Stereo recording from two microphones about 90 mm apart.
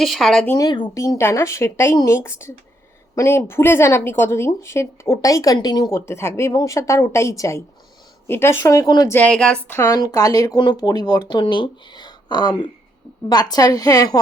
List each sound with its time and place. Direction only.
0.0 s speech: centre (ahead or behind)
0.9 s a woman's voice: 35° left (ahead or behind)
5.9 s speech: 30° left (ahead or behind)
9.2 s speech: 10° left (ahead or behind)
9.6 s a woman's voice: 30° left (ahead or behind)